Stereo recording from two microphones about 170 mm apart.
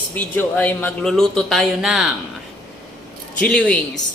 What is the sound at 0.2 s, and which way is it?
Speech, 10° left (ahead or behind).